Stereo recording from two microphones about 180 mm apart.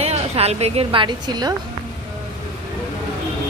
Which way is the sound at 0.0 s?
35° right (ahead or behind).